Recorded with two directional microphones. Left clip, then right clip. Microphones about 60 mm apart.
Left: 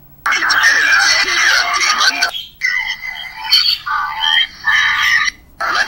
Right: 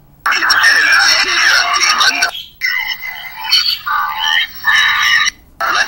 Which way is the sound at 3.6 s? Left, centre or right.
Right.